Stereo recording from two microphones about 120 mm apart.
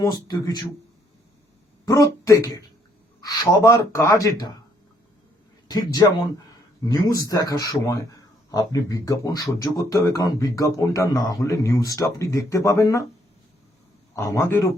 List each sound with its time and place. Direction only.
0.0 s speech: 30° left (ahead or behind)
1.8 s speech: 30° left (ahead or behind)
5.6 s speech: 35° left (ahead or behind)
14.2 s speech: 25° left (ahead or behind)